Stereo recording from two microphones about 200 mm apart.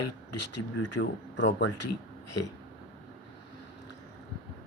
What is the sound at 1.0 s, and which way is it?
Speech, 65° left (ahead or behind).